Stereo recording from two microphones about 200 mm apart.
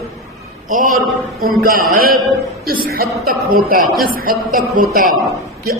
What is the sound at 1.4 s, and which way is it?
A man's voice, 45° right (ahead or behind).